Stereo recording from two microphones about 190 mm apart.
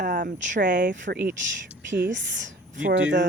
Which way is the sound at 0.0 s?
45° right (ahead or behind).